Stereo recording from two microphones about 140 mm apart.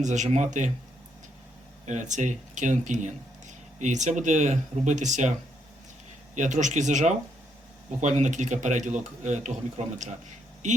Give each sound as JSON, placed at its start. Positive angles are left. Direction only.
{"t": 0.0, "sound": "speech", "side_deg": -60}
{"t": 1.9, "sound": "speech", "side_deg": -60}
{"t": 6.3, "sound": "speech", "side_deg": -60}